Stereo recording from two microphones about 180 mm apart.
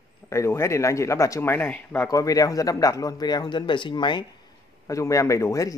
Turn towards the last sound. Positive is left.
turn(degrees=15)  # may be behind; listen again after turning